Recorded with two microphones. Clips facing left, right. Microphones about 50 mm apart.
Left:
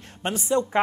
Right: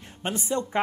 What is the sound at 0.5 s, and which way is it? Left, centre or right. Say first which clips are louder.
Speech: left 9 dB; left.